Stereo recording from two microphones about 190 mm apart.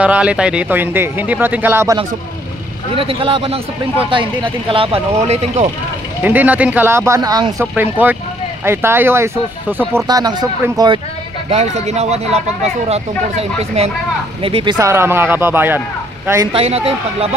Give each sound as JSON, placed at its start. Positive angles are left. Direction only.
{"t": 0.0, "sound": "speech", "side_deg": -5}
{"t": 2.9, "sound": "speech", "side_deg": -30}
{"t": 6.2, "sound": "speech", "side_deg": -10}
{"t": 7.7, "sound": "speech", "side_deg": -10}
{"t": 11.5, "sound": "speech", "side_deg": -35}
{"t": 14.8, "sound": "speech", "side_deg": -15}
{"t": 16.5, "sound": "speech", "side_deg": -30}